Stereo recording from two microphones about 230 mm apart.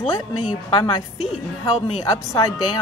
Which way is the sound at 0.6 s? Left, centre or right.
Left.